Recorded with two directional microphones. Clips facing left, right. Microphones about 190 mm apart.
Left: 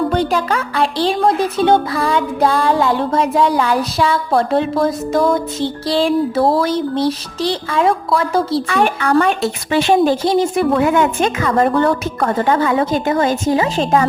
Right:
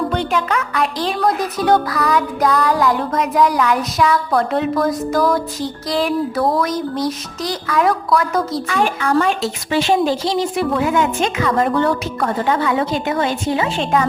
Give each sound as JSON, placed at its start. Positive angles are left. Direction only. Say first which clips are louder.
{"t": 0.1, "sound": "a woman's voice", "louder": "left 3 dB", "side_deg": 40}
{"t": 8.6, "sound": "a woman's voice", "louder": "left 2 dB", "side_deg": 60}